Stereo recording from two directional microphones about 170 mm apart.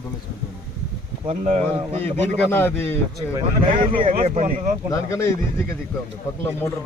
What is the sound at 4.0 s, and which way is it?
Speech, 35° right (ahead or behind).